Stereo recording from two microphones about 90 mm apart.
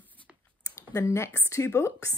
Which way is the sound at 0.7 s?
30° left (ahead or behind).